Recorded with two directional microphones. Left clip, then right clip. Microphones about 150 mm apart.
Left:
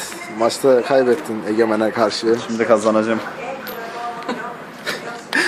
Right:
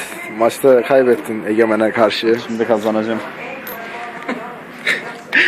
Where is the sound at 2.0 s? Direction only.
15° left (ahead or behind).